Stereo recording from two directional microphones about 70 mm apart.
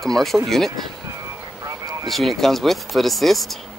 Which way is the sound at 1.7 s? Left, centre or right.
Right.